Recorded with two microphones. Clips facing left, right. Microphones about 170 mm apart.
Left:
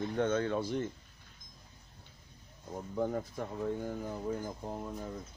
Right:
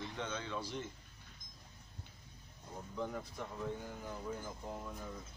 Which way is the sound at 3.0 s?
45° left (ahead or behind).